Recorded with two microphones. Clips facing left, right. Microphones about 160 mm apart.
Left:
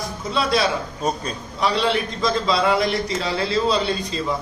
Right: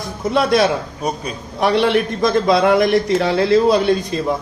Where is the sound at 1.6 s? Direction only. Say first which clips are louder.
Right 6 dB; 60° right (ahead or behind).